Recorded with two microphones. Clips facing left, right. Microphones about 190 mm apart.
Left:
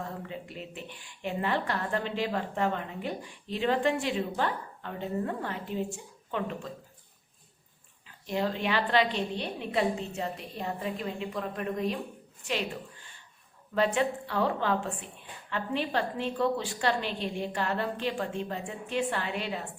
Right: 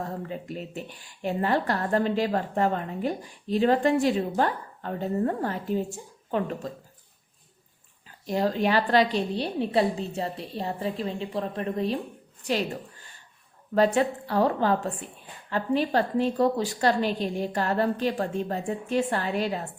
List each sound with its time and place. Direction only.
0.0 s a woman's voice: 40° right (ahead or behind)
8.3 s a woman's voice: 40° right (ahead or behind)